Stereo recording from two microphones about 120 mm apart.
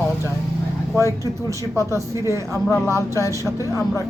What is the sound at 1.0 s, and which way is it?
Speech, 25° left (ahead or behind).